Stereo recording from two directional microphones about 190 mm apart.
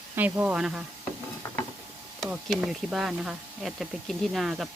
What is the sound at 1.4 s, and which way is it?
Mechanisms, 15° left (ahead or behind).